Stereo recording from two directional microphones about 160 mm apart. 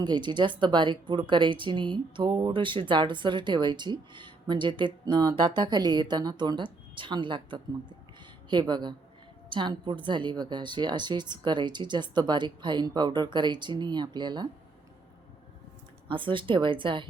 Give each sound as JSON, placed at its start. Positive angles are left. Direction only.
{"t": 0.0, "sound": "speech", "side_deg": -25}
{"t": 16.0, "sound": "speech", "side_deg": -30}